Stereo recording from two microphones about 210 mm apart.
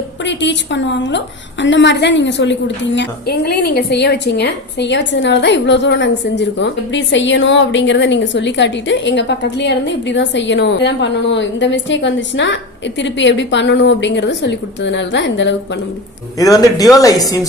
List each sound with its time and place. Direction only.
0.3 s a woman's voice: 60° left (ahead or behind)
16.4 s speech: 15° left (ahead or behind)